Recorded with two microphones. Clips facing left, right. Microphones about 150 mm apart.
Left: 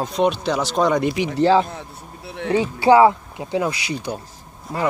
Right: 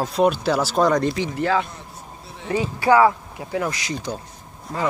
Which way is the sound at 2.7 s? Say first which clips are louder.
Left 3 dB; 25° left (ahead or behind).